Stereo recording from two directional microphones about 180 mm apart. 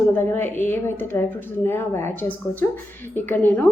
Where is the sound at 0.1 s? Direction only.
10° left (ahead or behind).